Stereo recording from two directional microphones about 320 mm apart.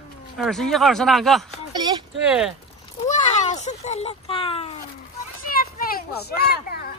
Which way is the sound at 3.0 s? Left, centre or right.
Left.